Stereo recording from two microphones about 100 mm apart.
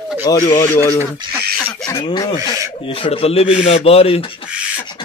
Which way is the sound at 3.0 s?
75° left (ahead or behind).